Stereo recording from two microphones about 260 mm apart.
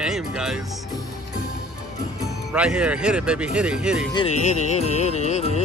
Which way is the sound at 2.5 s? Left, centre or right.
Centre.